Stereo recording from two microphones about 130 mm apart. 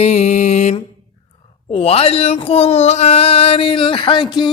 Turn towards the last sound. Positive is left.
turn(degrees=35)  # may be behind; listen again after turning